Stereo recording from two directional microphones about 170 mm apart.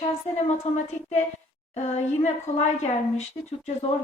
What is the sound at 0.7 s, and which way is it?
A woman's voice, 40° left (ahead or behind).